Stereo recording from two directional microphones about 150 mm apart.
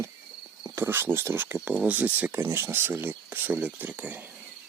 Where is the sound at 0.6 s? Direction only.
15° right (ahead or behind).